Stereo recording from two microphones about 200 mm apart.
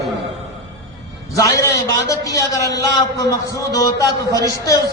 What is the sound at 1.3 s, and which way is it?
A man's voice, 15° left (ahead or behind).